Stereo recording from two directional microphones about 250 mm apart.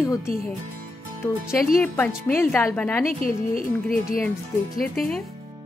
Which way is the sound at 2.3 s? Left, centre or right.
Centre.